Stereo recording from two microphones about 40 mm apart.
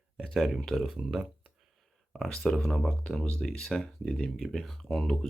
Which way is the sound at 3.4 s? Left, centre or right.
Centre.